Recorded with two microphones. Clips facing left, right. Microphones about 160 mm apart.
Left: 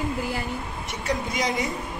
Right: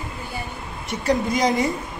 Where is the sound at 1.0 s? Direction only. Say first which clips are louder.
Right 7 dB; 40° right (ahead or behind).